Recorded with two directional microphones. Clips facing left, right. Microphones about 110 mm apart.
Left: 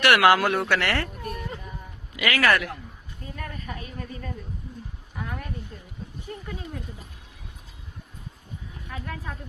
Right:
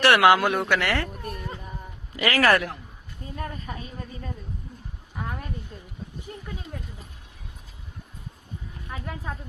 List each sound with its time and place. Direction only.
0.0 s speech: 25° right (ahead or behind)
2.1 s a woman's voice: 35° right (ahead or behind)
8.9 s a woman's voice: 20° right (ahead or behind)